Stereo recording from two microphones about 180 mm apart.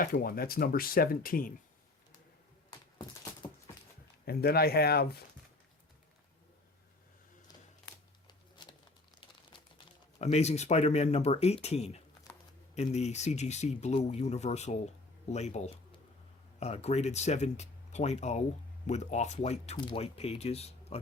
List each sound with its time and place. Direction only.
0.0 s speech: 55° left (ahead or behind)
4.3 s speech: 60° left (ahead or behind)
8.3 s patter: 25° left (ahead or behind)
9.5 s crumpling: 25° left (ahead or behind)
10.3 s speech: 40° left (ahead or behind)